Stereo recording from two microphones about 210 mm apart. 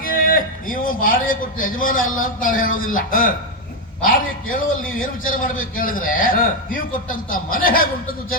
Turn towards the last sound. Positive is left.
turn(degrees=45)  # may be behind; listen again after turning